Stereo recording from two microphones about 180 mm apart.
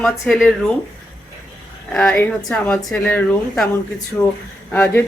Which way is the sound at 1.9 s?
5° left (ahead or behind).